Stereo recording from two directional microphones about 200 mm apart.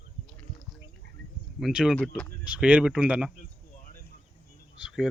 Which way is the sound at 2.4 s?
5° right (ahead or behind).